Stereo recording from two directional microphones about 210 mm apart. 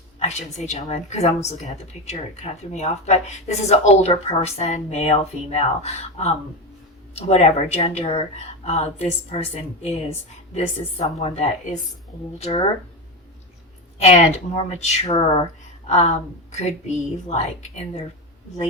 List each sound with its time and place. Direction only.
0.2 s a woman's voice: 30° left (ahead or behind)
14.0 s a woman's voice: 30° left (ahead or behind)